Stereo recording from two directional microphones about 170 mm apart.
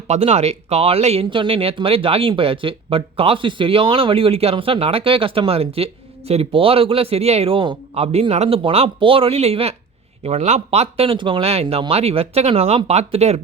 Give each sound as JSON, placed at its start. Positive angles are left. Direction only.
{"t": 0.1, "sound": "speech", "side_deg": -40}